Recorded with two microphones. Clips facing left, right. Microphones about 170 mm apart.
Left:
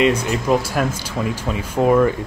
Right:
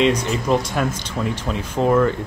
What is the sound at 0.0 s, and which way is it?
Speech, 5° left (ahead or behind).